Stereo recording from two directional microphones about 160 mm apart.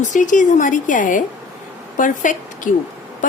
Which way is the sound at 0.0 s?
50° left (ahead or behind).